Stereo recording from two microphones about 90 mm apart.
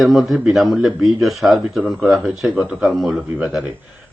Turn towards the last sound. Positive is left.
turn(degrees=-5)  # may be behind; listen again after turning